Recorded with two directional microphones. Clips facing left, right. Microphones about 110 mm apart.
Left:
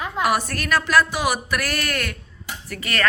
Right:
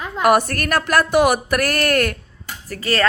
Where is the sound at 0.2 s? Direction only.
55° right (ahead or behind).